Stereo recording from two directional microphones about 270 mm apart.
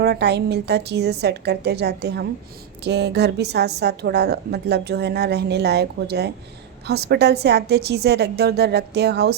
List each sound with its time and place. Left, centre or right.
0.0 s a woman's voice: right